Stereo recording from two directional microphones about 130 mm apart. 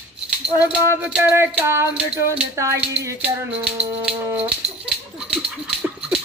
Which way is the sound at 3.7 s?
10° right (ahead or behind).